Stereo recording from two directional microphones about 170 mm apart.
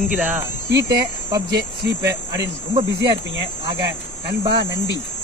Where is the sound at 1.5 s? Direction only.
85° right.